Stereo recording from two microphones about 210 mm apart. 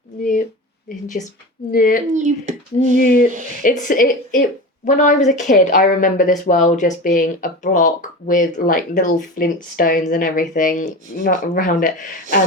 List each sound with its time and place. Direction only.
1.0 s speech: 35° left (ahead or behind)
2.1 s speech: 35° right (ahead or behind)
3.6 s speech: 40° left (ahead or behind)